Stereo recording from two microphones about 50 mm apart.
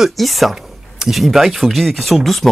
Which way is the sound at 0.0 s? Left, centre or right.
Centre.